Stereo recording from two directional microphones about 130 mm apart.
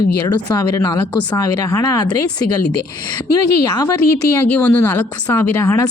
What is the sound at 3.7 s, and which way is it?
Speech, 25° left (ahead or behind).